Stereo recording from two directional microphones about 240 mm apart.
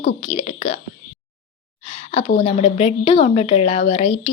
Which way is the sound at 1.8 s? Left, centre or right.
Left.